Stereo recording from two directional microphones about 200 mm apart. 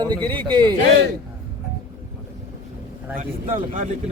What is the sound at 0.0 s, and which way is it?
Speech, 20° right (ahead or behind).